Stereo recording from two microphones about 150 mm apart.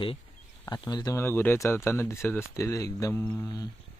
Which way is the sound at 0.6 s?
25° left (ahead or behind).